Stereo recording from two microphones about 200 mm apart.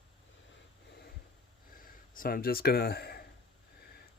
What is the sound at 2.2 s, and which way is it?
Speech, 45° left (ahead or behind).